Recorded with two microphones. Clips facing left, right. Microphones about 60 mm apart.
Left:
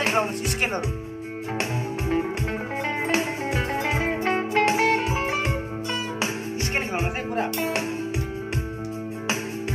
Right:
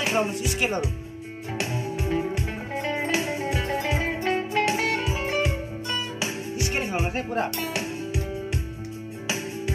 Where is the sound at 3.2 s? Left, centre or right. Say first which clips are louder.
Left 1 dB; left.